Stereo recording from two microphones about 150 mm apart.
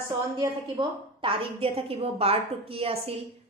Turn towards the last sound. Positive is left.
turn(degrees=-40)  # may be behind; listen again after turning